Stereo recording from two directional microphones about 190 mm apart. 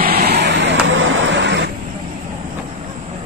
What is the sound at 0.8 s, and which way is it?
Vehicle, 90° right.